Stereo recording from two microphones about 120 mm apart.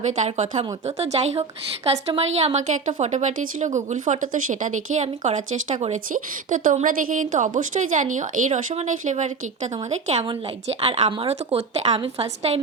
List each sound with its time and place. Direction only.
0.3 s a woman's voice: 75° right (ahead or behind)
10.2 s a woman's voice: 60° right (ahead or behind)